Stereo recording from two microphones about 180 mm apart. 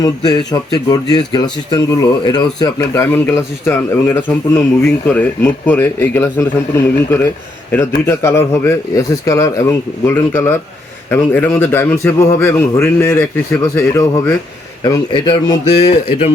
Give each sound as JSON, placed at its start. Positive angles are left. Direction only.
{"t": 0.0, "sound": "a man's voice", "side_deg": 20}